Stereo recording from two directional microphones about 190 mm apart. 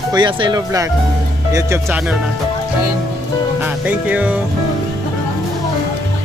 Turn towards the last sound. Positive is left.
turn(degrees=-5)  # may be behind; listen again after turning